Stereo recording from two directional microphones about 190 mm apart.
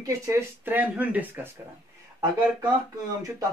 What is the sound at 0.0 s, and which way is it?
Speech, 15° right (ahead or behind).